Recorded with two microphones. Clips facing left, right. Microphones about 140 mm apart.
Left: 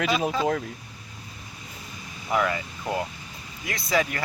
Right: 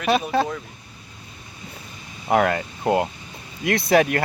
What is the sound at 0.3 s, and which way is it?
Speech, 65° right (ahead or behind).